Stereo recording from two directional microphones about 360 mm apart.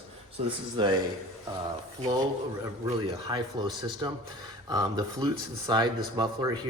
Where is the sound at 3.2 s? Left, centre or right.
Centre.